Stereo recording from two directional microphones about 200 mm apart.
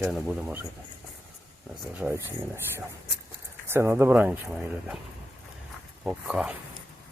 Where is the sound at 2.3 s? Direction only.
10° right (ahead or behind).